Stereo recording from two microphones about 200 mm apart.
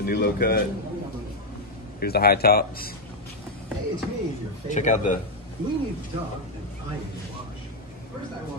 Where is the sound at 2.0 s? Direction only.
50° left (ahead or behind).